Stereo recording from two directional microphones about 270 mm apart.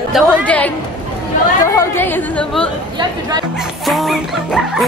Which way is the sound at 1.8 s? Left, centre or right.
Centre.